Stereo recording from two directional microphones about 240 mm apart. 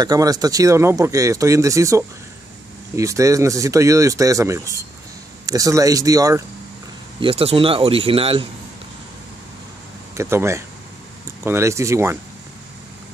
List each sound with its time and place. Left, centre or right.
0.0 s speech: centre
10.1 s speech: centre